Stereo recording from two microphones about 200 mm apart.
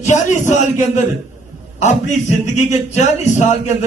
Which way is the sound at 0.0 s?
35° left (ahead or behind).